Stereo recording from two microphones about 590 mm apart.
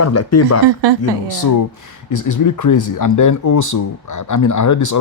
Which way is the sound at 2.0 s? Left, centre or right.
Left.